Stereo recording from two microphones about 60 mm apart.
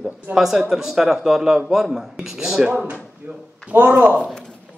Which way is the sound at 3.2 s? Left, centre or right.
Right.